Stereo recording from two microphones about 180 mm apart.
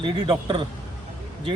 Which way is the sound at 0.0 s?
30° right (ahead or behind).